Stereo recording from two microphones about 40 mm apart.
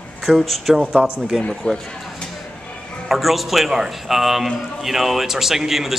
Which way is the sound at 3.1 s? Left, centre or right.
Centre.